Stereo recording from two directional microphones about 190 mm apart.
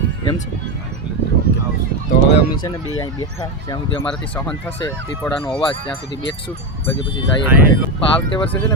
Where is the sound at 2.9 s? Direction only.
20° left (ahead or behind).